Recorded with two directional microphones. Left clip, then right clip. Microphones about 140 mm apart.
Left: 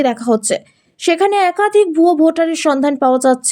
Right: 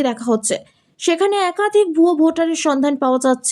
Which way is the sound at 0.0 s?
15° left (ahead or behind).